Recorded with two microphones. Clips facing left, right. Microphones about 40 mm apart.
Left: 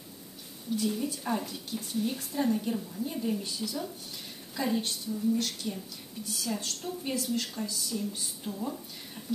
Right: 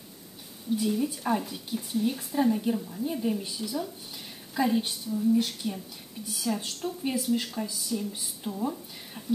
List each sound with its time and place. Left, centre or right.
0.7 s speech: centre